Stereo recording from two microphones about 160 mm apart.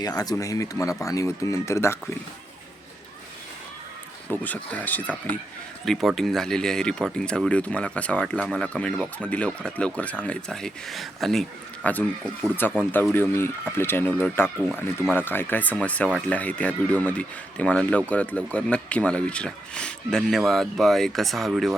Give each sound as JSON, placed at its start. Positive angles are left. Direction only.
{"t": 0.0, "sound": "speech", "side_deg": 25}
{"t": 4.4, "sound": "speech", "side_deg": 10}